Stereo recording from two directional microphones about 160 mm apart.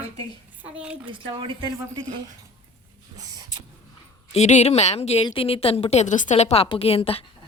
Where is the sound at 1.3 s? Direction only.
30° right (ahead or behind).